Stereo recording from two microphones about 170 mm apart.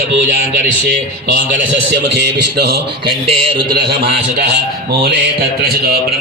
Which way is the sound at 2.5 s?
75° right (ahead or behind).